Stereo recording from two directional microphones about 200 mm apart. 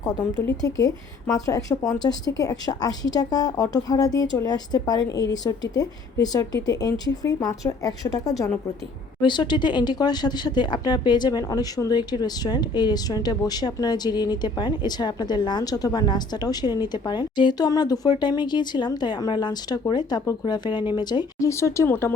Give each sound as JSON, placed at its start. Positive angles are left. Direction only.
{"t": 0.4, "sound": "a woman's voice", "side_deg": 15}